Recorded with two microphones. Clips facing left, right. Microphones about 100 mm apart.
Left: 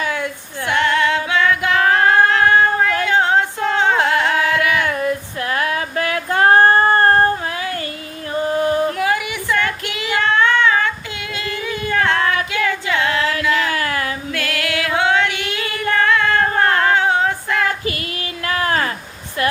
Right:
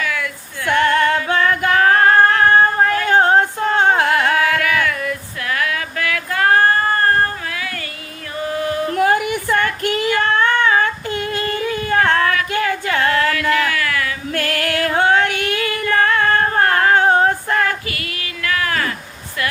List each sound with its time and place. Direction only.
0.0 s female singing: 25° left (ahead or behind)
0.7 s music: 45° right (ahead or behind)
3.1 s female singing: 45° right (ahead or behind)
4.1 s carnatic music: 45° right (ahead or behind)
4.4 s female singing: 25° left (ahead or behind)
8.4 s a sound: 30° left (ahead or behind)
8.9 s child singing: 45° right (ahead or behind)
12.2 s child singing: 25° left (ahead or behind)
12.5 s singing: 45° right (ahead or behind)
13.7 s a sound: 30° left (ahead or behind)
14.3 s female singing: 45° right (ahead or behind)
18.4 s a sound: 30° left (ahead or behind)